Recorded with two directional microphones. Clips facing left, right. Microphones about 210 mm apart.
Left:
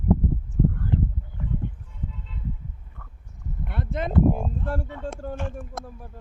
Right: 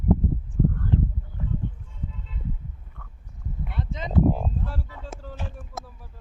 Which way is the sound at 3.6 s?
55° left (ahead or behind).